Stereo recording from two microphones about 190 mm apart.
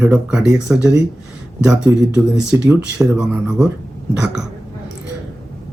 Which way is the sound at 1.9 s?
15° right (ahead or behind).